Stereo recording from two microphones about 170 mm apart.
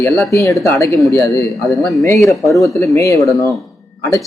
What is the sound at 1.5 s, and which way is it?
Speech, centre (ahead or behind).